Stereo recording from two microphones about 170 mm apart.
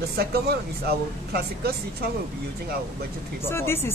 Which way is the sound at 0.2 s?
65° right (ahead or behind).